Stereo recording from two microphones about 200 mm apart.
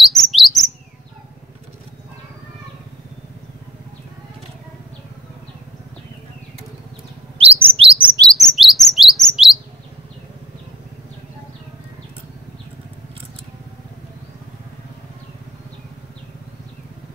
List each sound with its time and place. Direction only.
0.1 s bird: centre (ahead or behind)
7.3 s chirp: 30° right (ahead or behind)
8.3 s chirp: centre (ahead or behind)